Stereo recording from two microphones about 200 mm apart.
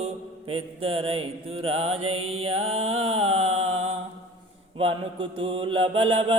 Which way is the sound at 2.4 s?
30° right (ahead or behind).